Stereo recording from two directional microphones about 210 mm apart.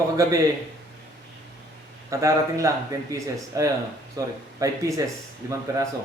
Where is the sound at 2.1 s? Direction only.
15° right (ahead or behind).